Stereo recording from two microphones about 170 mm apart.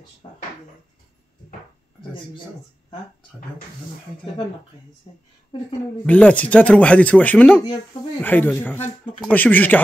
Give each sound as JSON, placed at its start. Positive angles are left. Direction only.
{"t": 0.2, "sound": "a woman's voice", "side_deg": 30}
{"t": 2.9, "sound": "speech", "side_deg": 55}
{"t": 5.1, "sound": "a woman's voice", "side_deg": 35}
{"t": 6.0, "sound": "speech", "side_deg": 5}